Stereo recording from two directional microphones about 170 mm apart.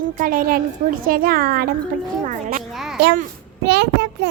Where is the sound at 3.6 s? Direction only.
85° right.